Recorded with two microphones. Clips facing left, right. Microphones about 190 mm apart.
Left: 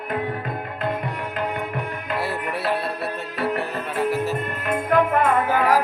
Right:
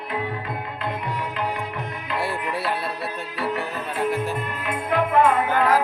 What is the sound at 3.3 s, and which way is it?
Music, 60° left (ahead or behind).